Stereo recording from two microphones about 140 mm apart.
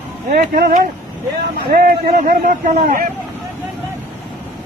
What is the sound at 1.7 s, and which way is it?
A man's voice, 90° right.